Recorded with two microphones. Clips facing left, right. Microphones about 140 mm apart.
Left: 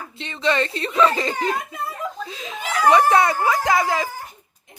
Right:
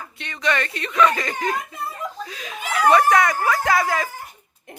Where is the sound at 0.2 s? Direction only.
25° left (ahead or behind).